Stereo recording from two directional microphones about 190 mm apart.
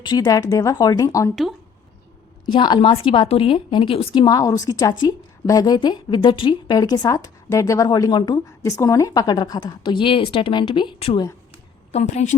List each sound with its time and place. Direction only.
0.0 s speech: 20° left (ahead or behind)
2.5 s a woman's voice: 25° left (ahead or behind)
11.9 s a woman's voice: 35° left (ahead or behind)